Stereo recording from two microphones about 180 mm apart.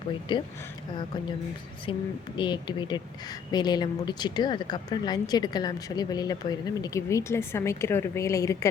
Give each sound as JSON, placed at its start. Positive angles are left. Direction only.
{"t": 0.3, "sound": "speech", "side_deg": 25}
{"t": 1.9, "sound": "speech", "side_deg": 25}